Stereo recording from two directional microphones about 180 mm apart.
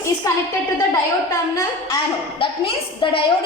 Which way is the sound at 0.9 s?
20° left (ahead or behind).